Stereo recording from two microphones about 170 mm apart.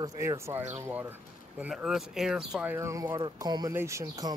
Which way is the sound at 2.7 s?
15° right (ahead or behind).